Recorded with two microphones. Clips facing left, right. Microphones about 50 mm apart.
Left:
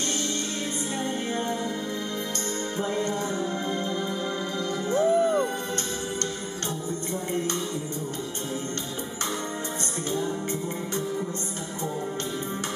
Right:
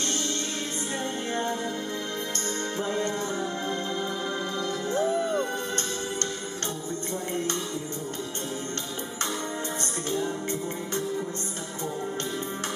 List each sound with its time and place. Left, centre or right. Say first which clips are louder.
2.8 s music: left 1 dB; centre
5.0 s music: left 6 dB; centre